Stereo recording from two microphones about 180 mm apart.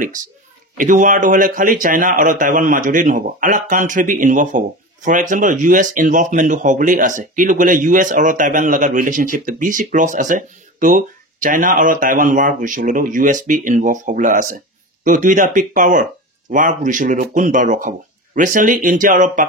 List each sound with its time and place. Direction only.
0.7 s speech: 45° right (ahead or behind)